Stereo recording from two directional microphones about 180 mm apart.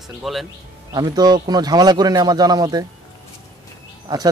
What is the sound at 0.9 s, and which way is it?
Speech, 20° right (ahead or behind).